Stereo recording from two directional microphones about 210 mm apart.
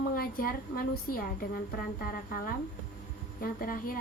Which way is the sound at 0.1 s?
45° left (ahead or behind).